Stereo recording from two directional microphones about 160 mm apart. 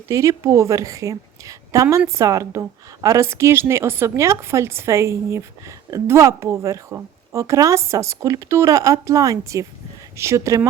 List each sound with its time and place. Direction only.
0.1 s a woman's voice: 20° right (ahead or behind)